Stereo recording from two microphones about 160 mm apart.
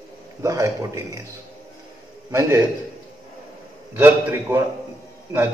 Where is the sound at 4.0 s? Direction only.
10° right (ahead or behind).